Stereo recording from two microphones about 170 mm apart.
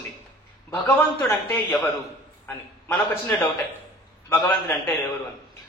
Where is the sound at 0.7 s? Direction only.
10° left (ahead or behind).